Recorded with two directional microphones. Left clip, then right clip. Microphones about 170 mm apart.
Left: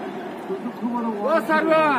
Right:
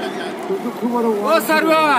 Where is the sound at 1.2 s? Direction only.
65° right (ahead or behind).